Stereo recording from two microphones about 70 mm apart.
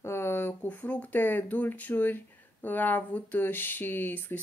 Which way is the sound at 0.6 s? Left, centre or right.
Left.